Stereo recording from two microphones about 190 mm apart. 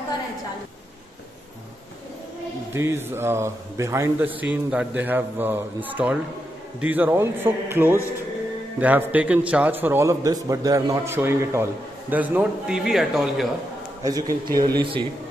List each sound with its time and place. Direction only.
2.7 s a man's voice: 10° right (ahead or behind)
14.0 s speech: 20° right (ahead or behind)